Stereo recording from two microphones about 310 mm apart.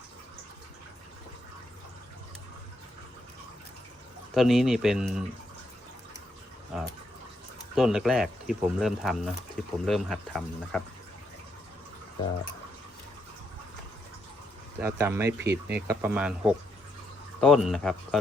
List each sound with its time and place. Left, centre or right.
4.4 s speech: centre
6.7 s a sound: centre
7.8 s speech: centre
14.8 s speech: centre
15.4 s speech: right
15.9 s speech: centre